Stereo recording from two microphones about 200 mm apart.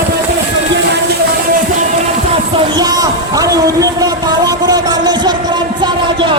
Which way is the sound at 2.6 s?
20° right (ahead or behind).